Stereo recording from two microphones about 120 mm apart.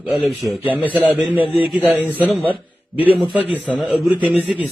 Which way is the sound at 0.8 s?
15° right (ahead or behind).